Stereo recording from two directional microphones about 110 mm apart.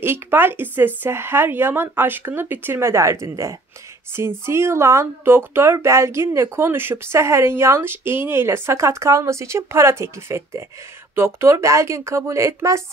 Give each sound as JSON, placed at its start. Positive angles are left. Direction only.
{"t": 0.0, "sound": "speech", "side_deg": -20}